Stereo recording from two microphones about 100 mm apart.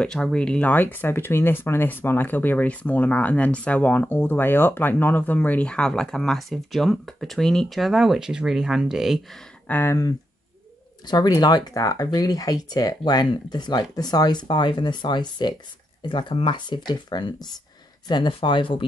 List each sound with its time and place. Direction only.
0.0 s speech: 10° left (ahead or behind)
9.7 s speech: 20° left (ahead or behind)
11.1 s speech: 40° left (ahead or behind); by 18.9 s 60° left (ahead or behind)